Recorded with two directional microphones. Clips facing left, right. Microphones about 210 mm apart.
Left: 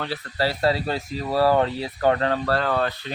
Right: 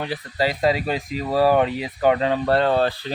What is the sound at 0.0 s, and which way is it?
Speech, 15° right (ahead or behind).